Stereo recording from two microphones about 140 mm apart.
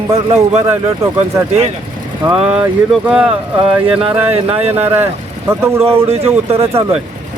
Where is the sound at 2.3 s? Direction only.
10° right (ahead or behind).